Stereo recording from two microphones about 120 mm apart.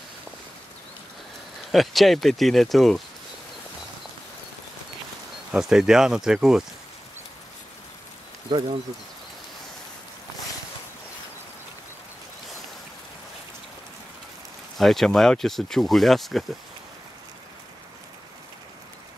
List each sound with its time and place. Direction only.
1.7 s speech: centre (ahead or behind)
5.5 s speech: 5° right (ahead or behind)
8.5 s speech: 45° right (ahead or behind)
14.8 s speech: centre (ahead or behind)